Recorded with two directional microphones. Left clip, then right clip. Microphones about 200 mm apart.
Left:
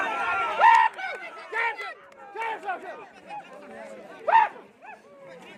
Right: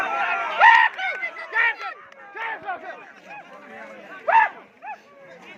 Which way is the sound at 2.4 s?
40° left (ahead or behind).